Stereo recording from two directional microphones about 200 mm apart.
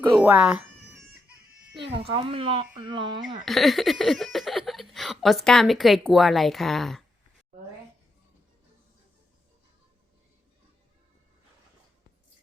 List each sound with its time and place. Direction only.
0.2 s cat: 5° right (ahead or behind)
1.8 s speech: 25° right (ahead or behind)
3.4 s speech: centre (ahead or behind)